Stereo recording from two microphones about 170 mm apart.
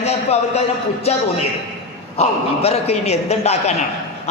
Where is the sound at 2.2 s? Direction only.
40° left (ahead or behind).